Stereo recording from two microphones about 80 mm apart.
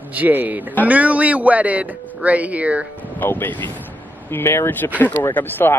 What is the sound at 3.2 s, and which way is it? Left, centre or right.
Speech, left.